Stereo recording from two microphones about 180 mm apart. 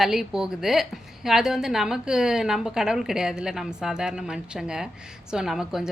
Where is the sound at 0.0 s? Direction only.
Centre (ahead or behind).